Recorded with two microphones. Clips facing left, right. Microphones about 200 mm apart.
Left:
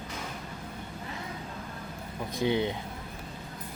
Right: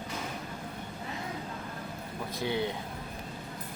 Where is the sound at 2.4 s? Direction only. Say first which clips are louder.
Left 4 dB; 20° left (ahead or behind).